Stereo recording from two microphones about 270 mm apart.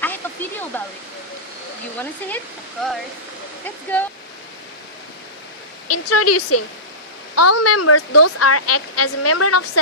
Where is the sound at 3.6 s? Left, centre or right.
Centre.